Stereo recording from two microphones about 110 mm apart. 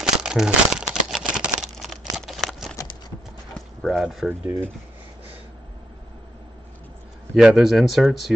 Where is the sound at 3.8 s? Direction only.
Centre (ahead or behind).